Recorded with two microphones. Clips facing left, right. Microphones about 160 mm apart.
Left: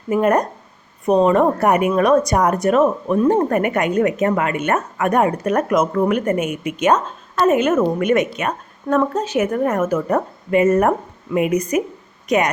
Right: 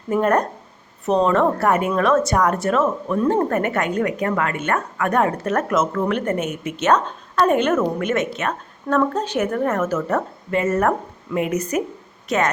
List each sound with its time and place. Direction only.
0.1 s a woman's voice: 10° left (ahead or behind)